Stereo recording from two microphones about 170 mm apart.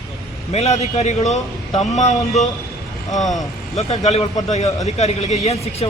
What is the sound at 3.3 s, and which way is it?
Speech, 40° left (ahead or behind).